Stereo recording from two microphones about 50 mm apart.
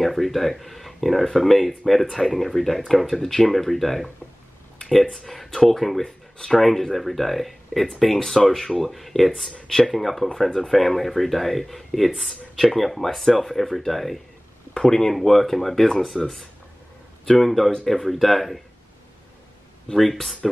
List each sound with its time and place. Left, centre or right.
0.0 s speech: centre
5.1 s speech: centre
6.0 s speech: centre
6.6 s speech: centre
9.5 s speech: centre
19.9 s speech: centre